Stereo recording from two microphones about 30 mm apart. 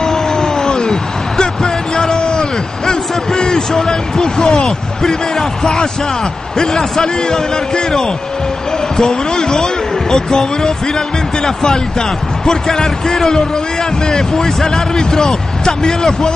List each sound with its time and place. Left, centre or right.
0.0 s cat: centre
1.4 s basketball bounce: left
2.9 s a sound: left
4.5 s a man's voice: centre